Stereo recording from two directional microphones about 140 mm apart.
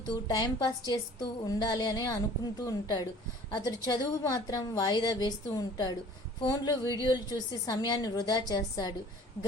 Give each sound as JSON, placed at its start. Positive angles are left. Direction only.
{"t": 0.3, "sound": "a woman's voice", "side_deg": 30}